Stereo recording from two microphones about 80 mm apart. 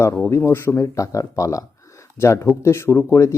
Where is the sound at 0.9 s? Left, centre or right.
Left.